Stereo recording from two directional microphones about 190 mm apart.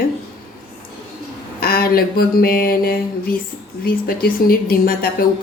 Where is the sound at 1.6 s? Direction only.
50° left (ahead or behind).